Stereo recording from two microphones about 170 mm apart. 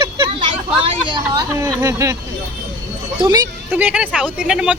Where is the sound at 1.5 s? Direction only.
15° right (ahead or behind).